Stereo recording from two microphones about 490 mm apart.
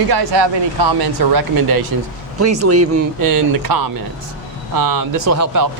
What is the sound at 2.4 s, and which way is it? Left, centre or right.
Speech, right.